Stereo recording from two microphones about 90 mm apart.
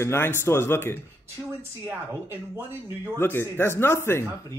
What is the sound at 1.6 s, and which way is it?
Speech, 25° right (ahead or behind).